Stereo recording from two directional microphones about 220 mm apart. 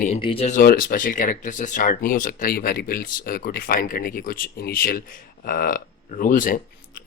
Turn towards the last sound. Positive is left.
turn(degrees=40)  # may be behind; listen again after turning